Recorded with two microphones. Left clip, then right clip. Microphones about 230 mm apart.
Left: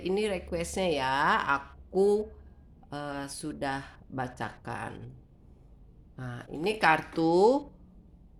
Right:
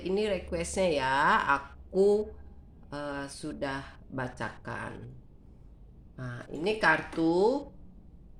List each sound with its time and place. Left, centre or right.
0.0 s speech: left
6.1 s speech: left